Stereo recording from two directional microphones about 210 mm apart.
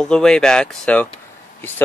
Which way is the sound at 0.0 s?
5° left (ahead or behind).